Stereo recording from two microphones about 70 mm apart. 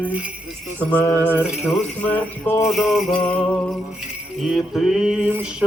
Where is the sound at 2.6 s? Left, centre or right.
Centre.